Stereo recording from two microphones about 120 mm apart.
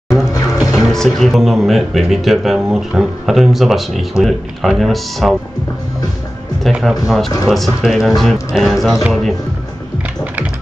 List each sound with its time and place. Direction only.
0.3 s music: 30° left (ahead or behind)
0.6 s speech: centre (ahead or behind)
6.8 s speech: centre (ahead or behind)